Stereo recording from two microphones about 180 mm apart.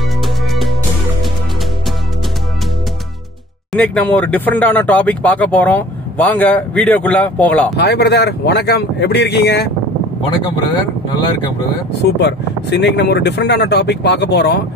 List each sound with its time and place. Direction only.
0.5 s music: centre (ahead or behind)
3.7 s speech: 5° left (ahead or behind)
7.7 s speech: 70° left (ahead or behind)
10.7 s speech: 25° left (ahead or behind)
12.0 s speech: 70° left (ahead or behind)